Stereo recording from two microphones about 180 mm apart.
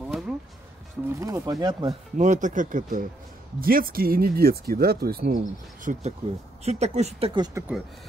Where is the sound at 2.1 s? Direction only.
45° right (ahead or behind).